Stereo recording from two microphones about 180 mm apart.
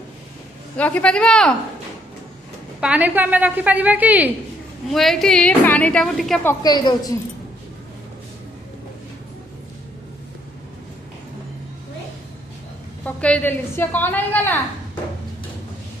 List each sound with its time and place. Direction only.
0.8 s a woman's voice: 10° left (ahead or behind)
2.8 s a woman's voice: 10° right (ahead or behind)
4.9 s a woman's voice: centre (ahead or behind)
6.4 s a woman's voice: 15° left (ahead or behind)
13.1 s a woman's voice: 10° left (ahead or behind)